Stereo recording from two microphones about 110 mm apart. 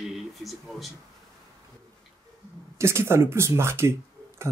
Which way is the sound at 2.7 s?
25° right (ahead or behind).